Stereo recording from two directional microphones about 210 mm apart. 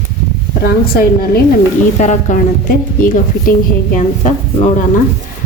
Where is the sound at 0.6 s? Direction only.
45° left (ahead or behind).